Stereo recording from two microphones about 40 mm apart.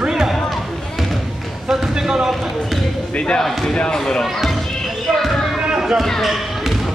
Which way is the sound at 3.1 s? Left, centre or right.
Left.